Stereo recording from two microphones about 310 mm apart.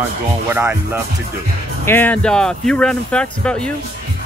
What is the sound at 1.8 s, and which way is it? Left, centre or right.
Speech, centre.